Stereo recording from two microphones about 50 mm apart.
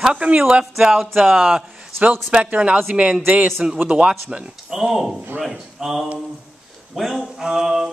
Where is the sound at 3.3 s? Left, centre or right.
Right.